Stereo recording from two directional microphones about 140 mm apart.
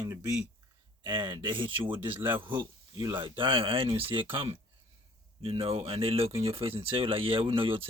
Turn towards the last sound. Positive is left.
turn(degrees=-40)  # may be behind; listen again after turning